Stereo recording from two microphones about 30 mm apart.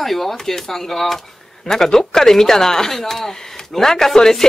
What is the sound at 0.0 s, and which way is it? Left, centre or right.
Speech, centre.